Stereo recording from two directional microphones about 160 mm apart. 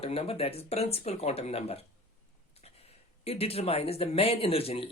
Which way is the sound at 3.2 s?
40° left (ahead or behind).